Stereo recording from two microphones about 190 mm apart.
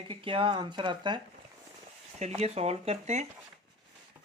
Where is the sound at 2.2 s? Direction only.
35° right (ahead or behind).